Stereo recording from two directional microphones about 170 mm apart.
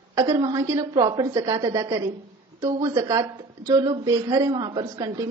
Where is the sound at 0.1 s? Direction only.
20° right (ahead or behind).